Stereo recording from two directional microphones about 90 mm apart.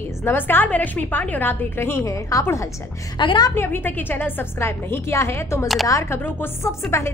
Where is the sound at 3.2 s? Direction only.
65° left (ahead or behind).